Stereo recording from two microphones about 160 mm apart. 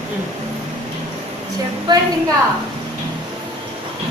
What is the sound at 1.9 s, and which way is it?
Speech, 25° right (ahead or behind).